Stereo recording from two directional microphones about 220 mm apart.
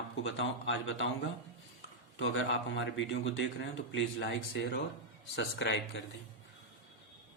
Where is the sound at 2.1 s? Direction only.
55° left (ahead or behind).